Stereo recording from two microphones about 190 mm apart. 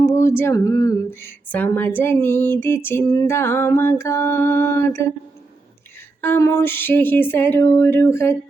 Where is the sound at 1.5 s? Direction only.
10° left (ahead or behind).